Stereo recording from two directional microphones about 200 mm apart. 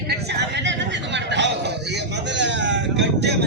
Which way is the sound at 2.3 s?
65° right (ahead or behind).